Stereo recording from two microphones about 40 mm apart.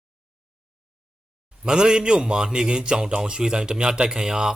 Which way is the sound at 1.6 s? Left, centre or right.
Centre.